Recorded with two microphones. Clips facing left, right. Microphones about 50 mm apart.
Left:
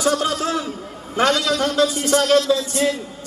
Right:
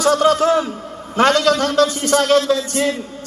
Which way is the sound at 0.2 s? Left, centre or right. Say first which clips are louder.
Right 8 dB; right.